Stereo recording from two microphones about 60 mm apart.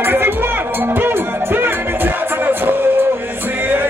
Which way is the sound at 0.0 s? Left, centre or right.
Right.